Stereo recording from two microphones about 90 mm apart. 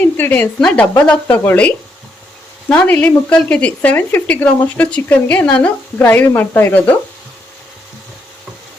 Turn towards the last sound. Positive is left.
turn(degrees=20)  # may be behind; listen again after turning